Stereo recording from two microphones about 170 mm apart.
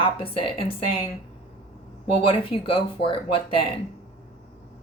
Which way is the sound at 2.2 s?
30° left (ahead or behind).